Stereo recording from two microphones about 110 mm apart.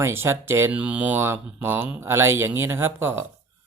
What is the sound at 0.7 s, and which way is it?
Speech, 10° right (ahead or behind).